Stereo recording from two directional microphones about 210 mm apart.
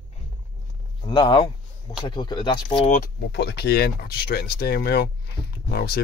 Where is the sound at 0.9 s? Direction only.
20° left (ahead or behind).